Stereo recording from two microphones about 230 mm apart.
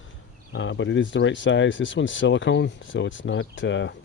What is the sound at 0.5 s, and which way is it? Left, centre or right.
Speech, left.